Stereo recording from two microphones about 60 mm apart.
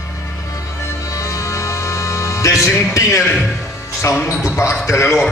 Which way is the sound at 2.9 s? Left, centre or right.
Left.